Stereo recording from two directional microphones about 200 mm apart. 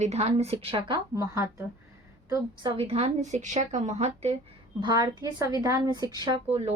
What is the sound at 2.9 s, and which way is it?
A woman's voice, 30° right (ahead or behind).